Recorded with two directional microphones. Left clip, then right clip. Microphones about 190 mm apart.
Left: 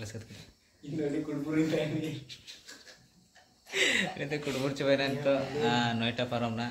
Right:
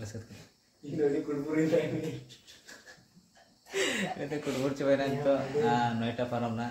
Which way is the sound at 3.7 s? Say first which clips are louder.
Left 3 dB; 10° left (ahead or behind).